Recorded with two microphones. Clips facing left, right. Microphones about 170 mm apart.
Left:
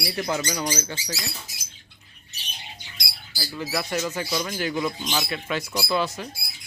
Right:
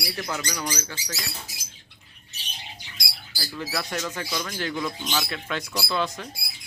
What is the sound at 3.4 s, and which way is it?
Speech, centre (ahead or behind).